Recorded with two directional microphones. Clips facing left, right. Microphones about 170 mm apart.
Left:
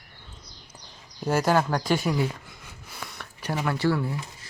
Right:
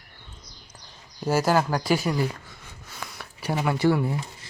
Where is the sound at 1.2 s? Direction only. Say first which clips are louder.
Right 1 dB; 5° right (ahead or behind).